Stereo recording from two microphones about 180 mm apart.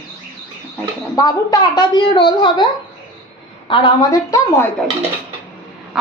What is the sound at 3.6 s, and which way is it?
A woman's voice, 25° left (ahead or behind).